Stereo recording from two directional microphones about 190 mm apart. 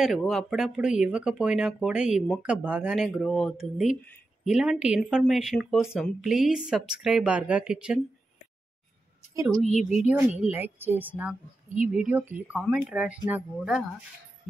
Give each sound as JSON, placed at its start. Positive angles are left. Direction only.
{"t": 0.0, "sound": "speech", "side_deg": 0}
{"t": 9.3, "sound": "a woman's voice", "side_deg": -15}
{"t": 9.7, "sound": "a woman's voice", "side_deg": 35}
{"t": 10.1, "sound": "a woman's voice", "side_deg": -10}